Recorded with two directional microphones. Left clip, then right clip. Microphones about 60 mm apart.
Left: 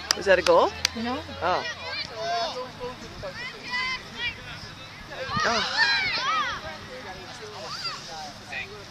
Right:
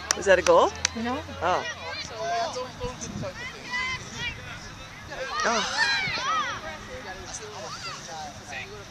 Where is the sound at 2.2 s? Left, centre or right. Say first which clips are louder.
Even; centre.